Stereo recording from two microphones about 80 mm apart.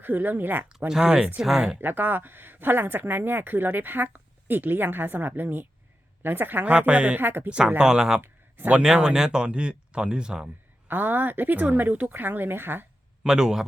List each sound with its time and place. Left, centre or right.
0.0 s speech: right
0.9 s speech: centre
1.8 s speech: right
6.7 s speech: centre
7.2 s speech: right
7.8 s speech: centre
8.2 s a sound: right
8.8 s speech: centre
10.8 s speech: right
13.2 s speech: centre